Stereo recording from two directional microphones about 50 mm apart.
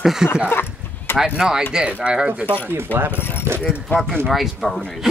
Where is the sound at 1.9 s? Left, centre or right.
Right.